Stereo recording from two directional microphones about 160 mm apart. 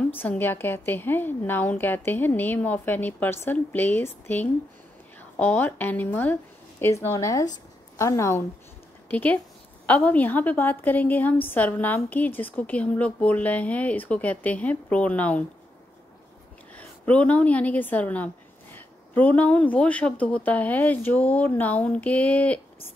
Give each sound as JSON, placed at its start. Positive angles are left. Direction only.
{"t": 0.0, "sound": "a woman's voice", "side_deg": 10}
{"t": 16.7, "sound": "a woman's voice", "side_deg": 10}